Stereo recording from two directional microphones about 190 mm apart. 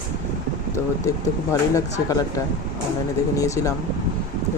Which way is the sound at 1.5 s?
15° left (ahead or behind).